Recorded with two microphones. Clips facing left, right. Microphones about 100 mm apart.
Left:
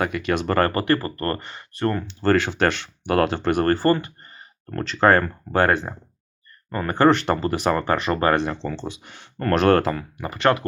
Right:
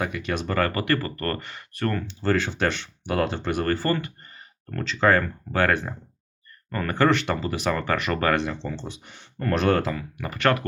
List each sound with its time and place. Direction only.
0.0 s speech: 65° left (ahead or behind)
0.7 s speech: 35° left (ahead or behind)
2.0 s speech: 60° left (ahead or behind); by 4.8 s 30° left (ahead or behind)
4.8 s speech: 50° left (ahead or behind); by 8.4 s 30° left (ahead or behind)
8.6 s speech: 90° left; by 10.1 s 50° left (ahead or behind)
10.2 s speech: 25° left (ahead or behind)